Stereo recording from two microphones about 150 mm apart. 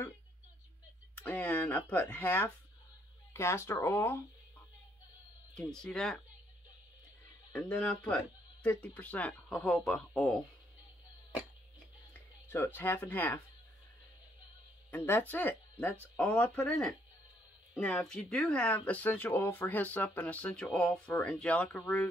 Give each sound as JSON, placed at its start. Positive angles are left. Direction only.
{"t": 1.2, "sound": "speech", "side_deg": 10}
{"t": 5.5, "sound": "speech", "side_deg": 5}
{"t": 7.5, "sound": "speech", "side_deg": 10}
{"t": 12.1, "sound": "speech", "side_deg": 15}
{"t": 14.9, "sound": "speech", "side_deg": 15}